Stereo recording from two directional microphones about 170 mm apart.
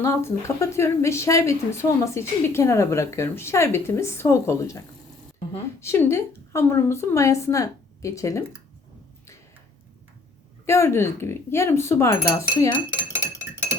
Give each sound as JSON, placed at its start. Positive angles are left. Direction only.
{"t": 0.0, "sound": "a woman's voice", "side_deg": 15}
{"t": 5.8, "sound": "a woman's voice", "side_deg": 15}
{"t": 10.7, "sound": "a woman's voice", "side_deg": 15}